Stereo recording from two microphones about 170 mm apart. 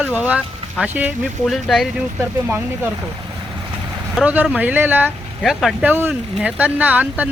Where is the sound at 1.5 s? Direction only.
Centre (ahead or behind).